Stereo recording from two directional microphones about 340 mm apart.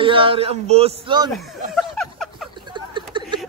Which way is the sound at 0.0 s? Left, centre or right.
Centre.